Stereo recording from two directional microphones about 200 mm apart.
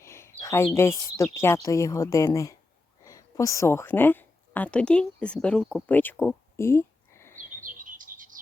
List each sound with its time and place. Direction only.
0.0 s speech: 15° left (ahead or behind)
7.6 s bird: 40° right (ahead or behind)